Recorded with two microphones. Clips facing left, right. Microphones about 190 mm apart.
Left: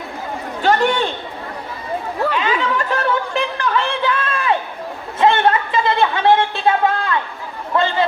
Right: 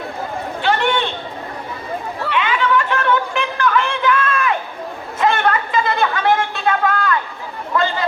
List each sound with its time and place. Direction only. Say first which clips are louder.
0.6 s chatter: left 2 dB; 40° left (ahead or behind)
2.2 s chatter: even; 35° left (ahead or behind)
5.2 s a sound: left 2 dB; 30° left (ahead or behind)